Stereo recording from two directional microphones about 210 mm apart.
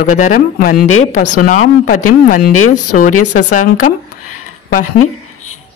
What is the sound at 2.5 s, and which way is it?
Speech, 90° left.